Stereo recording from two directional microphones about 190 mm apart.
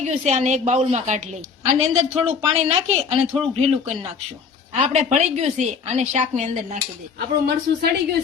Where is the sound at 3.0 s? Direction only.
35° right (ahead or behind).